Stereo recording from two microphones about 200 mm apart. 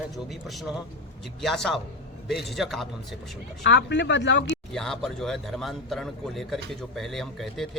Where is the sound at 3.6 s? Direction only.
65° left (ahead or behind).